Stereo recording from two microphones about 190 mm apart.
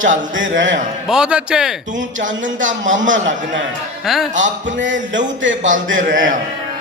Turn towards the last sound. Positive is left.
turn(degrees=-45)  # may be behind; listen again after turning